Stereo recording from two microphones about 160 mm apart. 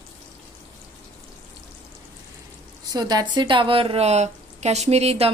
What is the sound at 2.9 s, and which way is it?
A woman's voice, 25° right (ahead or behind).